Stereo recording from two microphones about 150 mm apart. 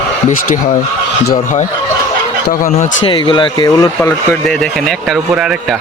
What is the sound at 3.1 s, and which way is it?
Speech, 30° left (ahead or behind).